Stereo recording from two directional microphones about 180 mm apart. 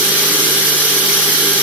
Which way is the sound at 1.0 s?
5° right (ahead or behind).